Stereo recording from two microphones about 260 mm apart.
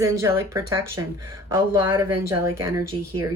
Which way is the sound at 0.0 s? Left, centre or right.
Centre.